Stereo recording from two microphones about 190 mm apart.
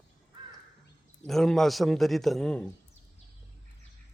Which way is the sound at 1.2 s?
Centre (ahead or behind).